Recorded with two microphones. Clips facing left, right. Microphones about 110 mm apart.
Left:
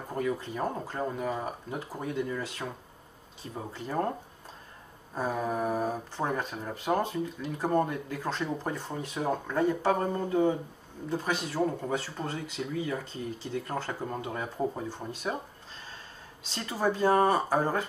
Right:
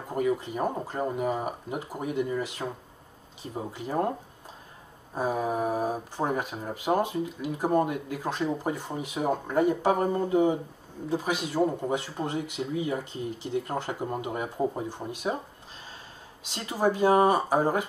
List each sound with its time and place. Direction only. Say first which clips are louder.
0.1 s speech: right 4 dB; 15° right (ahead or behind)
16.4 s speech: right 3 dB; 15° right (ahead or behind)